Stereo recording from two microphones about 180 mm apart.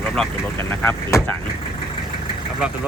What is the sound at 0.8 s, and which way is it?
Speech, 15° left (ahead or behind).